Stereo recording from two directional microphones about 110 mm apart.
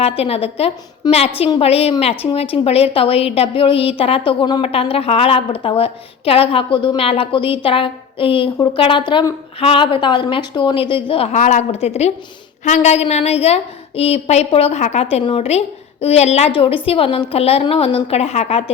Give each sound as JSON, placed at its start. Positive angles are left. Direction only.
{"t": 0.0, "sound": "a woman's voice", "side_deg": 65}
{"t": 1.0, "sound": "a woman's voice", "side_deg": 40}
{"t": 1.6, "sound": "a woman's voice", "side_deg": 65}
{"t": 4.3, "sound": "a woman's voice", "side_deg": 45}
{"t": 4.6, "sound": "a woman's voice", "side_deg": 60}
{"t": 11.3, "sound": "a woman's voice", "side_deg": 90}
{"t": 12.6, "sound": "a woman's voice", "side_deg": 90}
{"t": 16.6, "sound": "a woman's voice", "side_deg": 60}